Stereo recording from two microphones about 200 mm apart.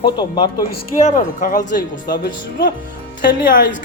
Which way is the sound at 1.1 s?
40° left (ahead or behind).